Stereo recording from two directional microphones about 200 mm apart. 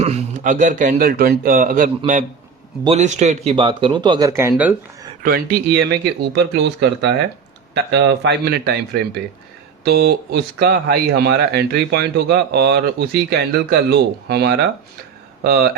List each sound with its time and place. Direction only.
0.0 s a man's voice: 35° right (ahead or behind); by 4.7 s 10° right (ahead or behind)
5.2 s speech: 45° right (ahead or behind)
9.8 s speech: 55° right (ahead or behind)